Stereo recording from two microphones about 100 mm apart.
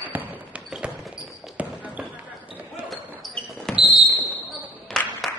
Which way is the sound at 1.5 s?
15° right (ahead or behind).